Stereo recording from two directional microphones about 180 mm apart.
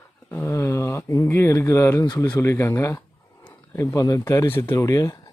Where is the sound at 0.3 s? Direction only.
15° left (ahead or behind).